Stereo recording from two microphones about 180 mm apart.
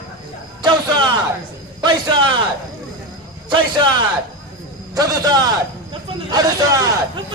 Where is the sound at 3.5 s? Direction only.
25° right (ahead or behind).